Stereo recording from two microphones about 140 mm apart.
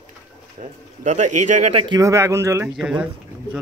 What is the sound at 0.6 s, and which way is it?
Speech, 60° right (ahead or behind).